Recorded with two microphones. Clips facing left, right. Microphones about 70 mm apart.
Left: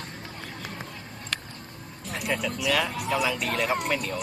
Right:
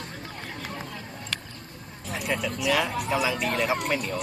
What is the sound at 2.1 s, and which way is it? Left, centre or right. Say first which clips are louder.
Speech: even; centre.